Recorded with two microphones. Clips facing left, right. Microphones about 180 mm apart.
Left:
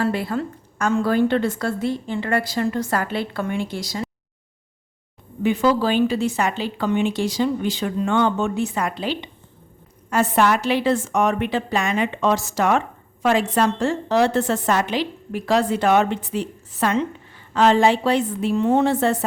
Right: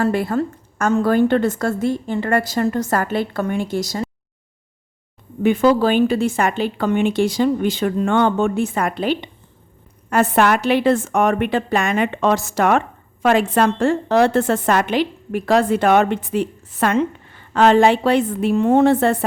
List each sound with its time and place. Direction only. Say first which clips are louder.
0.0 s a woman's voice: right 4 dB; 50° right (ahead or behind)
5.4 s a woman's voice: right 4 dB; 50° right (ahead or behind)